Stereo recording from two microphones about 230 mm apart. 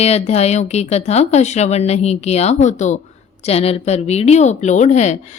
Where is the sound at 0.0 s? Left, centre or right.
Left.